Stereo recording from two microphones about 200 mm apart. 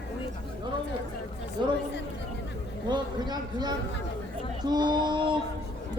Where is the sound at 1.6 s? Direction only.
25° right (ahead or behind).